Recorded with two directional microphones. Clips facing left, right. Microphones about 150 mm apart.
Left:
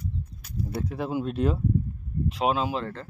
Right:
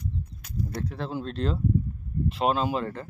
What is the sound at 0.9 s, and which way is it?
Speech, 10° left (ahead or behind).